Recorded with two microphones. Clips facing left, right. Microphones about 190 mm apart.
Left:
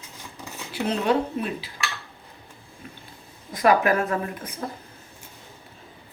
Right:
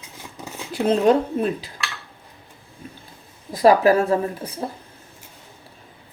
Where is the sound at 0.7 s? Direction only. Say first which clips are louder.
Right 6 dB; 45° right (ahead or behind).